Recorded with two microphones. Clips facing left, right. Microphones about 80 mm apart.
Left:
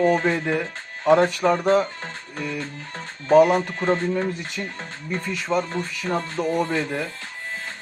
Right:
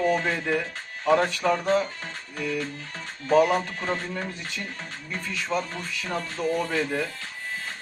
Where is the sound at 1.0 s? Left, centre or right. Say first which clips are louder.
Left 5 dB; left.